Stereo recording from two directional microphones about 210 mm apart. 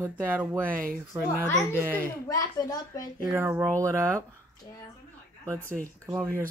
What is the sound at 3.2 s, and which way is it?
Speech, 10° right (ahead or behind).